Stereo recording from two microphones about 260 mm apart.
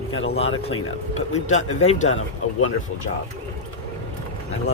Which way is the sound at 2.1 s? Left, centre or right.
Left.